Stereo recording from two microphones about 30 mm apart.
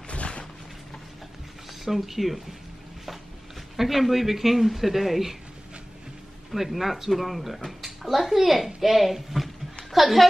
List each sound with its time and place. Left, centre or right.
0.1 s a sound: left
1.9 s speech: centre
3.7 s speech: centre
6.5 s speech: centre